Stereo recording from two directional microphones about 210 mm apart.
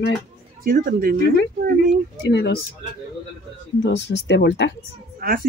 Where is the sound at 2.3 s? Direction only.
55° left (ahead or behind).